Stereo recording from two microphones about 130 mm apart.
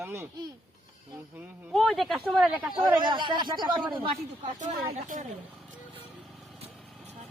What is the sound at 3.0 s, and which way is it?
Speech, 40° right (ahead or behind).